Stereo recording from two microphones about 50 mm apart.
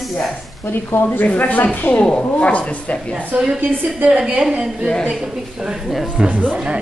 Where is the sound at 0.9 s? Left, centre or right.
Left.